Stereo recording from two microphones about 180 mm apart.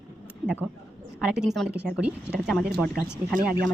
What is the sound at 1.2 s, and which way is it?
Speech, 5° right (ahead or behind).